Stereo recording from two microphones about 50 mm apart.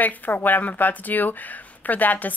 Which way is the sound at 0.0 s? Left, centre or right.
Left.